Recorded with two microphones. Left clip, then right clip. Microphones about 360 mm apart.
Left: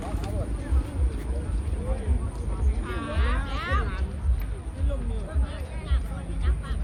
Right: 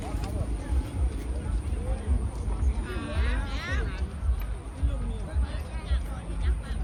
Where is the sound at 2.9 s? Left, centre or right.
Centre.